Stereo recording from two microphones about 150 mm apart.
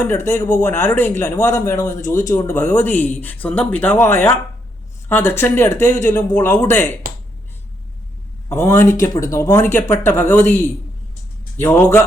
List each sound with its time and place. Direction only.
0.3 s speech: 15° left (ahead or behind)
7.1 s a sound: 70° right (ahead or behind)
8.4 s speech: 20° left (ahead or behind)
11.5 s speech: 15° left (ahead or behind)